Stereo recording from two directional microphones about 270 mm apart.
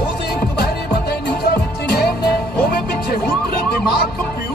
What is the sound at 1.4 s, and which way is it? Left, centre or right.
Music, left.